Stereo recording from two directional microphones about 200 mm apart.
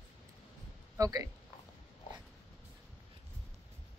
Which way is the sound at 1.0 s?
15° right (ahead or behind).